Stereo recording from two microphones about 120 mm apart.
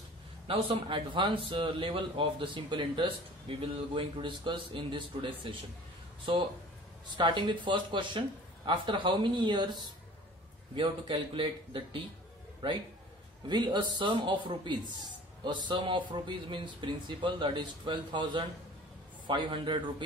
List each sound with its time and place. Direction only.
0.5 s a man's voice: 45° right (ahead or behind)
13.5 s a man's voice: 40° right (ahead or behind)